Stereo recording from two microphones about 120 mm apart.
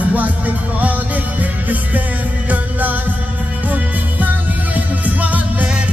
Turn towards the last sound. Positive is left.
turn(degrees=-15)  # may be behind; listen again after turning